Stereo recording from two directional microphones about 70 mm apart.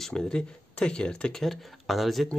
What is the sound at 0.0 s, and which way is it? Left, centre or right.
Speech, centre.